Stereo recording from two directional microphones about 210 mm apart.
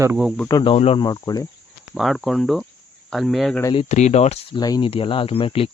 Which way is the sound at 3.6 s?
25° left (ahead or behind).